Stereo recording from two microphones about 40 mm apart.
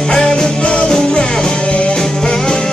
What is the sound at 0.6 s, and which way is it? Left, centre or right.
Music, left.